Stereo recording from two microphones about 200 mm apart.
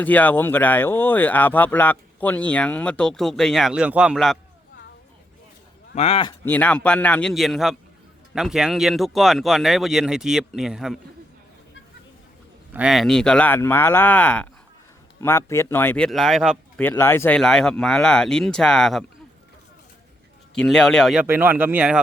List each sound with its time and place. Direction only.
0.0 s speech: 10° left (ahead or behind)
5.9 s speech: 30° left (ahead or behind)
6.4 s speech: 10° left (ahead or behind)
12.7 s speech: 5° right (ahead or behind)
16.9 s speech: 10° left (ahead or behind)
20.6 s speech: 5° left (ahead or behind)